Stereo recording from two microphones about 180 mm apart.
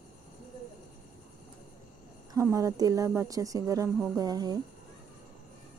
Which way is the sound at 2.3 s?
20° right (ahead or behind).